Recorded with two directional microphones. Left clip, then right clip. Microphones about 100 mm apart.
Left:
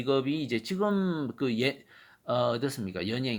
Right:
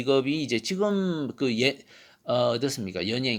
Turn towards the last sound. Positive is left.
turn(degrees=-25)  # may be behind; listen again after turning